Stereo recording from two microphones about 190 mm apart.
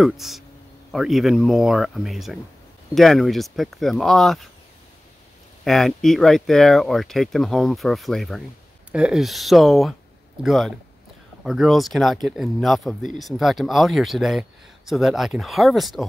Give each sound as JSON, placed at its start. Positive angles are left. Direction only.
{"t": 0.0, "sound": "speech", "side_deg": 0}
{"t": 5.6, "sound": "speech", "side_deg": 0}